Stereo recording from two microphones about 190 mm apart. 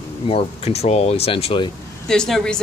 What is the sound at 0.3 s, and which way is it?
Speech, 30° left (ahead or behind).